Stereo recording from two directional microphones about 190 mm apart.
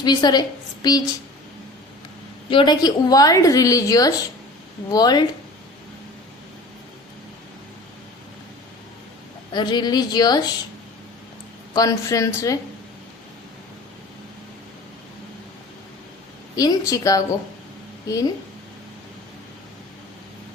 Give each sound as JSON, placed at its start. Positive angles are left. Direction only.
{"t": 0.0, "sound": "a woman's voice", "side_deg": 20}
{"t": 2.5, "sound": "a woman's voice", "side_deg": 25}
{"t": 9.5, "sound": "a woman's voice", "side_deg": 25}
{"t": 11.7, "sound": "a woman's voice", "side_deg": 20}
{"t": 16.6, "sound": "a woman's voice", "side_deg": 20}